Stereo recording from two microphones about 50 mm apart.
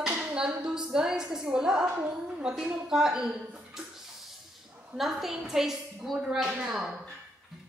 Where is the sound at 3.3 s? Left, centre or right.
Right.